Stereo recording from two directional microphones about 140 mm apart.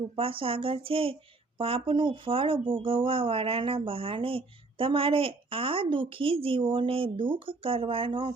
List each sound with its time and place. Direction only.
0.2 s speech: 40° right (ahead or behind)